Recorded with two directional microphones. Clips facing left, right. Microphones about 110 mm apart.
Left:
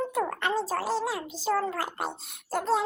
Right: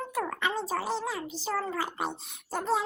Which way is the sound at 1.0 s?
10° left (ahead or behind).